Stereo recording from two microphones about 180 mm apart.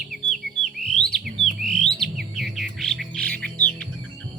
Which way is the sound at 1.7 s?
5° left (ahead or behind).